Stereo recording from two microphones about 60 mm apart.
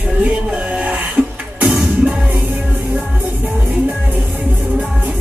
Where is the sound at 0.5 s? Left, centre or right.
Right.